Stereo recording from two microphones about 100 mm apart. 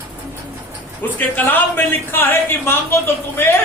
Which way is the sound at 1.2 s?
20° left (ahead or behind).